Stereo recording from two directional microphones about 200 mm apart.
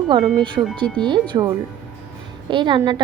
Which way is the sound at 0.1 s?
25° right (ahead or behind).